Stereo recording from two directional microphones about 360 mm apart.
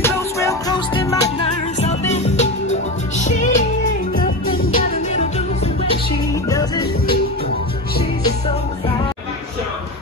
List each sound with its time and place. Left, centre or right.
0.0 s music: centre
6.5 s music: centre